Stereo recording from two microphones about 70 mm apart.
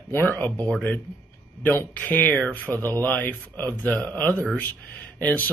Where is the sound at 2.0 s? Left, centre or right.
Left.